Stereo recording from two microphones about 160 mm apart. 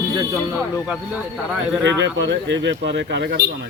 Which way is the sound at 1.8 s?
90° right.